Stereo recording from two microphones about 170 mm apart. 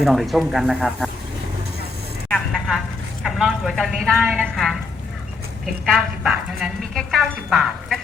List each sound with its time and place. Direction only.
0.0 s speech: centre (ahead or behind)
2.3 s vehicle: centre (ahead or behind)
3.2 s speech: centre (ahead or behind)
5.8 s speech: centre (ahead or behind)